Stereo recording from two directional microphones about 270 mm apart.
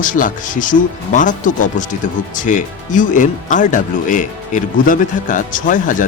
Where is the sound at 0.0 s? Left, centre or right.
Left.